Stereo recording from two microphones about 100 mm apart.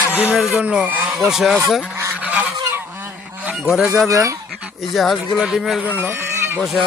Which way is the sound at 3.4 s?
5° right (ahead or behind).